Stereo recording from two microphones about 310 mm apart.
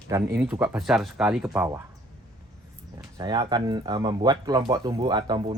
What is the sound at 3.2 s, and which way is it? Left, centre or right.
Speech, centre.